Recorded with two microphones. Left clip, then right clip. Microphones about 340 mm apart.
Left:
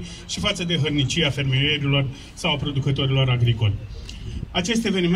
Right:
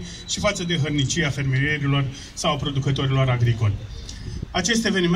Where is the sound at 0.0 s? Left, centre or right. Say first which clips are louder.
Right 2 dB; centre.